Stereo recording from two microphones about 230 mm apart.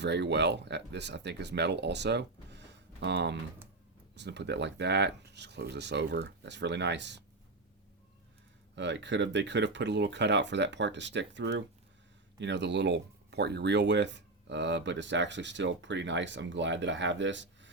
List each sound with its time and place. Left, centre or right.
0.0 s speech: right
8.7 s speech: right